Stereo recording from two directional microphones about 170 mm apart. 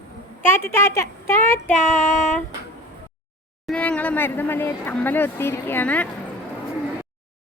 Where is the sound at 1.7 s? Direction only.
45° left (ahead or behind).